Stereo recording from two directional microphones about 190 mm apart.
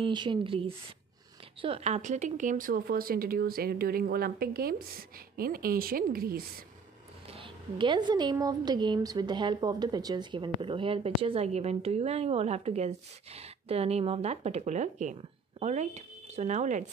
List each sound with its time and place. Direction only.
0.0 s speech: 25° right (ahead or behind); by 6.4 s 50° right (ahead or behind)
7.2 s speech: 30° right (ahead or behind)